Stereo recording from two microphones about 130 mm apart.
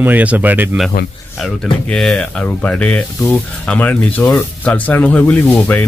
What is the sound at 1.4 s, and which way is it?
Speech, 5° left (ahead or behind).